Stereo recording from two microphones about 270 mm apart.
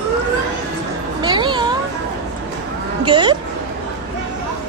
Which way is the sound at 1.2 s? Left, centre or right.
Centre.